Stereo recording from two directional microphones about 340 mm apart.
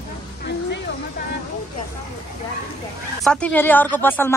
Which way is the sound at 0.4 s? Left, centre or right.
Left.